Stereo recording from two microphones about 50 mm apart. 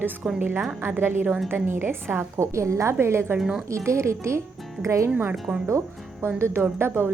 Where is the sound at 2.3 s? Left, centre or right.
Right.